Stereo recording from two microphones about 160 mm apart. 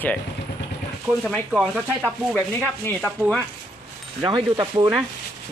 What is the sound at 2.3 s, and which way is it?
Speech, 10° left (ahead or behind).